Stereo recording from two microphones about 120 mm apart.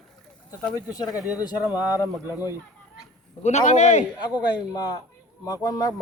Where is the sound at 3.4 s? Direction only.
75° left (ahead or behind).